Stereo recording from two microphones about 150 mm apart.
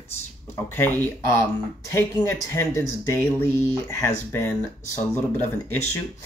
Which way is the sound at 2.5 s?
15° left (ahead or behind).